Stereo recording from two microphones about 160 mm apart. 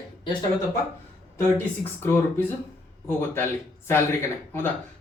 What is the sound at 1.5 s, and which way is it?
Speech, 15° left (ahead or behind).